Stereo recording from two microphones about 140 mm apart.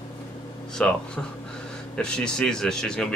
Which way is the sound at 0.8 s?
10° left (ahead or behind).